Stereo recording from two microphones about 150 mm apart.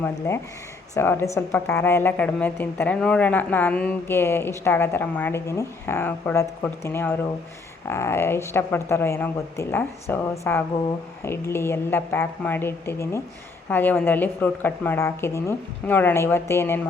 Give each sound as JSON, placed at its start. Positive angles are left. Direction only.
{"t": 0.3, "sound": "speech", "side_deg": 15}